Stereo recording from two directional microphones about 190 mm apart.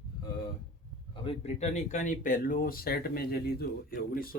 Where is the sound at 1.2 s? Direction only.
35° left (ahead or behind).